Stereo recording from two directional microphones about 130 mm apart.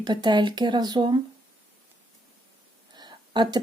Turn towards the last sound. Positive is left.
turn(degrees=-35)  # may be behind; listen again after turning